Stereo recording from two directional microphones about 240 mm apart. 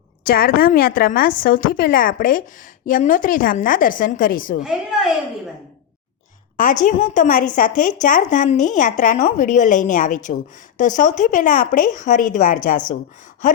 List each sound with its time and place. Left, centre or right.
0.3 s speech: left
6.6 s speech: left